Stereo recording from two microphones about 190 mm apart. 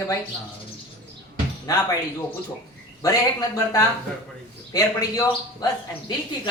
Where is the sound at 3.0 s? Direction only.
15° left (ahead or behind).